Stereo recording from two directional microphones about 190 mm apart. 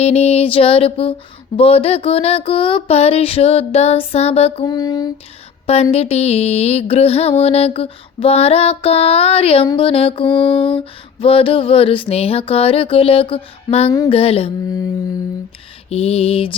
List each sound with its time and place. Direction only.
0.0 s music: 30° left (ahead or behind)
5.6 s music: 30° left (ahead or behind)
9.6 s a sound: 30° left (ahead or behind)
14.1 s music: 30° left (ahead or behind)
15.9 s music: 30° left (ahead or behind)